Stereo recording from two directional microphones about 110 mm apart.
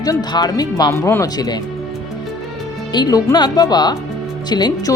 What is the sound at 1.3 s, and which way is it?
Speech, 35° left (ahead or behind).